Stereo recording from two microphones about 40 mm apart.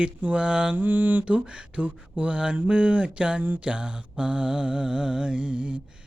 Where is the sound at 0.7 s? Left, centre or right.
Right.